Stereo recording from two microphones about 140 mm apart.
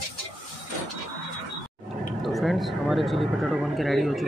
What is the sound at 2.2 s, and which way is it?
Speech, centre (ahead or behind).